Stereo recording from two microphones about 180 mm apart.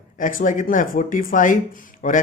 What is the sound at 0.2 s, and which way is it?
Speech, 50° left (ahead or behind).